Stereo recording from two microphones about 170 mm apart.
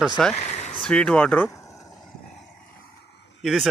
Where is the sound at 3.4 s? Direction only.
Centre (ahead or behind).